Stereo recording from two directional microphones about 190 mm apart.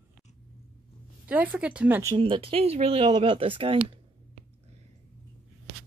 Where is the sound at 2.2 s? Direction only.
30° right (ahead or behind).